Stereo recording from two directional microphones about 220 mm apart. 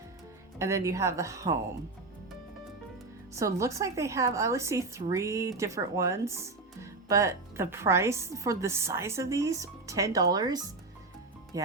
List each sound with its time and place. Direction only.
0.6 s a woman's voice: 15° right (ahead or behind)
3.3 s a woman's voice: 15° right (ahead or behind)